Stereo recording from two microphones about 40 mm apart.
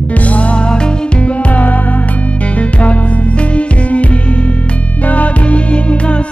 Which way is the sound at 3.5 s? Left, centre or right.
Left.